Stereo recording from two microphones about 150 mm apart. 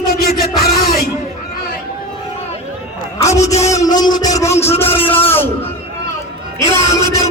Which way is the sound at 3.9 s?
25° left (ahead or behind).